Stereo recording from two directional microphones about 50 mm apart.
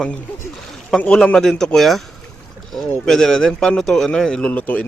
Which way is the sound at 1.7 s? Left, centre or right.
Centre.